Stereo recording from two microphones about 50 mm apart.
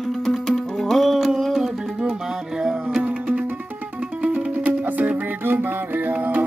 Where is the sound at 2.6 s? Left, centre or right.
Centre.